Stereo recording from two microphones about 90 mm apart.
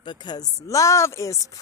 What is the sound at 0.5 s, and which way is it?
Speech, 35° left (ahead or behind).